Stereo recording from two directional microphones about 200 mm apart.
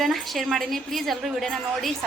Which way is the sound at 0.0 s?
Centre (ahead or behind).